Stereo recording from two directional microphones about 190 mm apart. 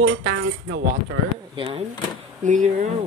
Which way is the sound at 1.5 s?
30° right (ahead or behind).